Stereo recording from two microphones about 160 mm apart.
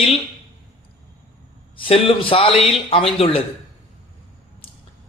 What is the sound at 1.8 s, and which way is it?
A man's voice, 35° left (ahead or behind).